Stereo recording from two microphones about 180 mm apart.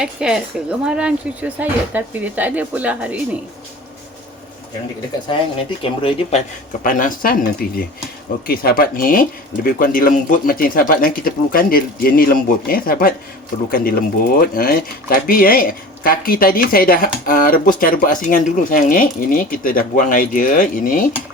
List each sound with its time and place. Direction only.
0.0 s speech: 5° right (ahead or behind)
5.3 s speech: 30° left (ahead or behind)
6.8 s speech: 50° left (ahead or behind)